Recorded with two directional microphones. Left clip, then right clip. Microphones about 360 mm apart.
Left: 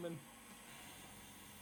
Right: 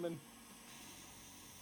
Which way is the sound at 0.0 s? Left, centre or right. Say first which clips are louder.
Right 4 dB; centre.